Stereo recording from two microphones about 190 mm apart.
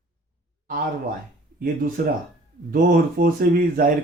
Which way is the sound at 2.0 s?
50° right (ahead or behind).